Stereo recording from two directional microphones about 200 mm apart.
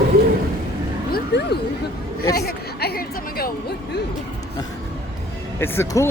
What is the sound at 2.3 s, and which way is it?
Chatter, 50° left (ahead or behind).